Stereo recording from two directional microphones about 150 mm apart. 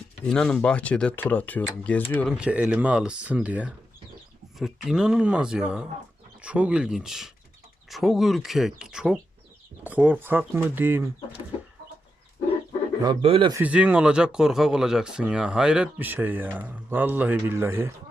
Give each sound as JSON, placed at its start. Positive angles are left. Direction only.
{"t": 0.3, "sound": "speech", "side_deg": 5}
{"t": 2.4, "sound": "speech", "side_deg": -10}
{"t": 13.2, "sound": "a man's voice", "side_deg": -40}
{"t": 13.5, "sound": "speech", "side_deg": -10}